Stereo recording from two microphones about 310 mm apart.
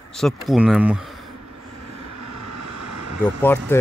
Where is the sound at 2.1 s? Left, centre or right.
Right.